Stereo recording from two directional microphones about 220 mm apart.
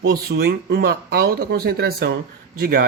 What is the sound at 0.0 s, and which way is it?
Speech, 45° right (ahead or behind).